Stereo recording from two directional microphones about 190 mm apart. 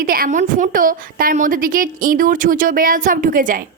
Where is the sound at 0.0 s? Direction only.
50° right (ahead or behind).